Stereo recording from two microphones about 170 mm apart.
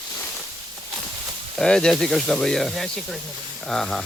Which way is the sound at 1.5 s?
5° left (ahead or behind).